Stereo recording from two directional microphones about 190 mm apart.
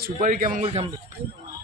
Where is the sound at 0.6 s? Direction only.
35° right (ahead or behind).